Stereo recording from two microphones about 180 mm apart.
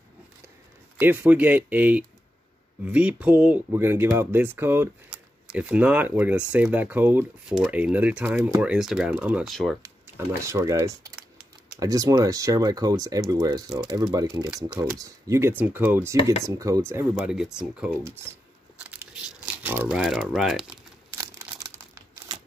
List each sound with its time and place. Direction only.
0.9 s speech: 10° right (ahead or behind)
10.1 s speech: 15° right (ahead or behind)
17.1 s speech: centre (ahead or behind)
18.9 s crumpling: 10° right (ahead or behind)
21.2 s crumpling: 15° right (ahead or behind)